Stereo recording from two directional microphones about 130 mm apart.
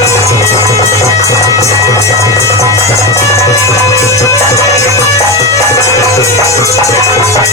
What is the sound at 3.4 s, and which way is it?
Music, 25° left (ahead or behind).